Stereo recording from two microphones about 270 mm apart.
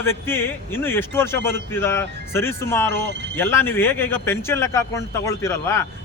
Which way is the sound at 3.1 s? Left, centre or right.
Right.